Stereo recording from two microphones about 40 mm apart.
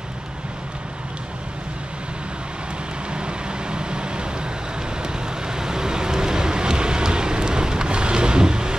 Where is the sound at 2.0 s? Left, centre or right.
Right.